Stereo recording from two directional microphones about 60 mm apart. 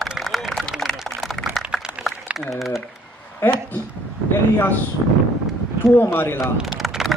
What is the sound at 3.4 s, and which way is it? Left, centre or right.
Speech, left.